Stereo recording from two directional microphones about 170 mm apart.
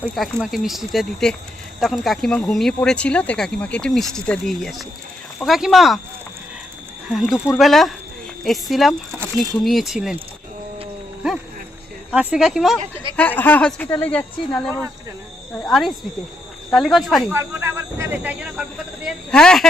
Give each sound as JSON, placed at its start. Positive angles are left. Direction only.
{"t": 0.2, "sound": "speech", "side_deg": 0}
{"t": 7.1, "sound": "speech", "side_deg": 0}
{"t": 12.1, "sound": "speech", "side_deg": -5}
{"t": 12.8, "sound": "speech", "side_deg": -30}
{"t": 13.1, "sound": "speech", "side_deg": 10}
{"t": 17.3, "sound": "speech", "side_deg": -15}
{"t": 19.0, "sound": "speech", "side_deg": 5}